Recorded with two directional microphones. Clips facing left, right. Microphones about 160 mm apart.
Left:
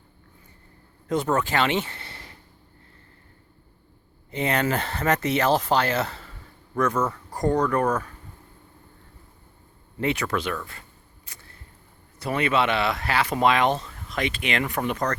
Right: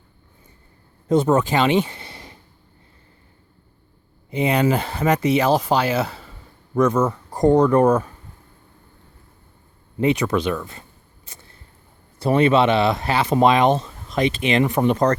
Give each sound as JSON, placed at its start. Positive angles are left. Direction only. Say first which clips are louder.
{"t": 1.0, "sound": "speech", "louder": "right 7 dB", "side_deg": -25}
{"t": 4.3, "sound": "speech", "louder": "right 5 dB", "side_deg": -10}
{"t": 10.0, "sound": "speech", "louder": "right 6 dB", "side_deg": -20}
{"t": 11.3, "sound": "a sound", "louder": "right 4 dB", "side_deg": -25}
{"t": 12.2, "sound": "speech", "louder": "right 7 dB", "side_deg": -30}